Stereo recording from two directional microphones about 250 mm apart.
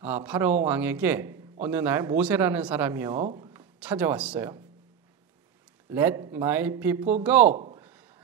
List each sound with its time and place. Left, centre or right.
0.0 s a man's voice: centre
3.3 s a sound: centre
3.8 s a man's voice: centre
5.9 s a man's voice: centre
7.4 s speech: right
7.7 s a sound: centre